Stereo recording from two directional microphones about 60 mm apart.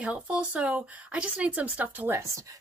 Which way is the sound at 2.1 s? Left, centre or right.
Right.